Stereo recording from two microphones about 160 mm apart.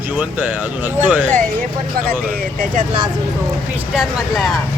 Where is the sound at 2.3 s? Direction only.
60° right (ahead or behind).